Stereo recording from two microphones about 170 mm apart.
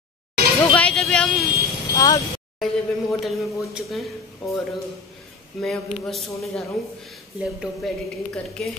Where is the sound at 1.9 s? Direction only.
20° left (ahead or behind).